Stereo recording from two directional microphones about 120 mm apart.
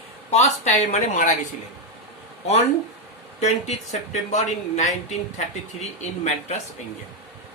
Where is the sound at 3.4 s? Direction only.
65° left (ahead or behind).